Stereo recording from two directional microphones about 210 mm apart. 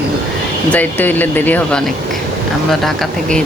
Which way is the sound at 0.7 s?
10° left (ahead or behind).